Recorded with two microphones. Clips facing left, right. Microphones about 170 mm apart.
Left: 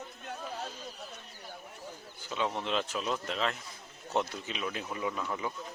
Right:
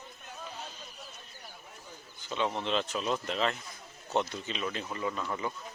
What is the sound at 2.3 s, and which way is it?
Speech, centre (ahead or behind).